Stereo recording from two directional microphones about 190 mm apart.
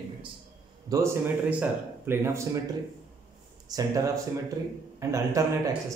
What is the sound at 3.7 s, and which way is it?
A man's voice, 15° right (ahead or behind).